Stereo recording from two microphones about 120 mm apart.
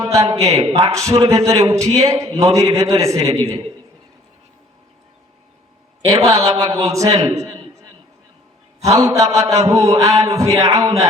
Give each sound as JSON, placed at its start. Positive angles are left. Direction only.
{"t": 0.0, "sound": "a man's voice", "side_deg": -30}
{"t": 0.5, "sound": "speech", "side_deg": -55}
{"t": 0.9, "sound": "a man's voice", "side_deg": -30}
{"t": 6.2, "sound": "a man's voice", "side_deg": -30}
{"t": 8.8, "sound": "a man's voice", "side_deg": -30}